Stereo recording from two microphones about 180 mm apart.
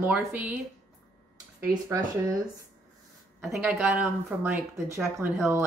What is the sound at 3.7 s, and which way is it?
Speech, 10° right (ahead or behind).